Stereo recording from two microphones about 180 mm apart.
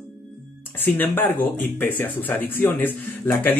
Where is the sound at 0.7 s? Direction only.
10° left (ahead or behind).